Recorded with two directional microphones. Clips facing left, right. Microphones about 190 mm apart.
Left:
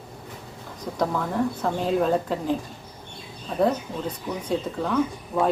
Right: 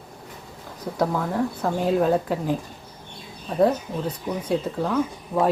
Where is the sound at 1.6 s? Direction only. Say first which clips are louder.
Right 3 dB; 10° right (ahead or behind).